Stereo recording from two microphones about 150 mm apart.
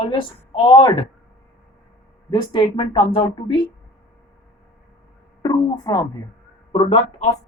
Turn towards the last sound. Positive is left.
turn(degrees=40)  # may be behind; listen again after turning